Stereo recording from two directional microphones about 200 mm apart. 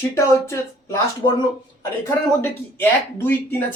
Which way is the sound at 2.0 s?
10° left (ahead or behind).